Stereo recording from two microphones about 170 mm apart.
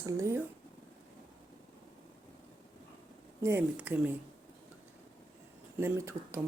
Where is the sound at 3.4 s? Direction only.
10° right (ahead or behind).